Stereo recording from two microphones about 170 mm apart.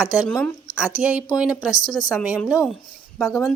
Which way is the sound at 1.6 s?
20° left (ahead or behind).